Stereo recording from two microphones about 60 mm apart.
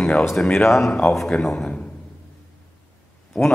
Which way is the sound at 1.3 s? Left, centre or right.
Centre.